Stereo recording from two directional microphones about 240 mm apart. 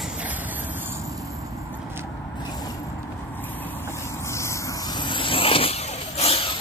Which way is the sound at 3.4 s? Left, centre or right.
Centre.